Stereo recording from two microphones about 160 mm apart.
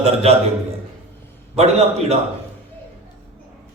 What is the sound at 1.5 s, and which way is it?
Speech, 40° right (ahead or behind).